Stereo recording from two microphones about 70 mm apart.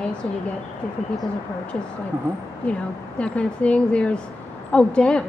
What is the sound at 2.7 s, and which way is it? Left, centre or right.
A woman's voice, centre.